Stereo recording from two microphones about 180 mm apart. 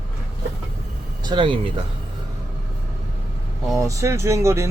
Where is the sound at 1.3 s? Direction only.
25° right (ahead or behind).